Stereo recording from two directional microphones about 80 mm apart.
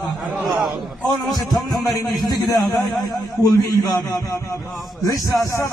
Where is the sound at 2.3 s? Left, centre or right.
Left.